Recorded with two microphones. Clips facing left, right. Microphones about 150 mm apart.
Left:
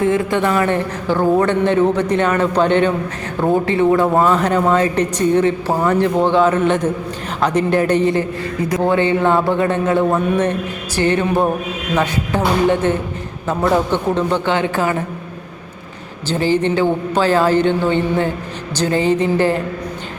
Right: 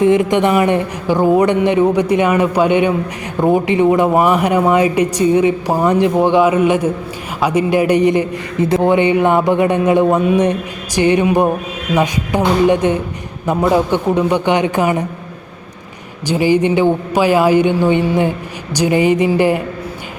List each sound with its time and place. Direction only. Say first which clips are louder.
0.0 s speech: right 4 dB; 20° right (ahead or behind)
16.2 s speech: right 3 dB; 15° right (ahead or behind)